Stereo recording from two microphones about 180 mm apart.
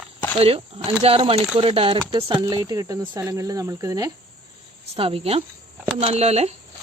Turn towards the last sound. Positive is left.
turn(degrees=-35)  # may be behind; listen again after turning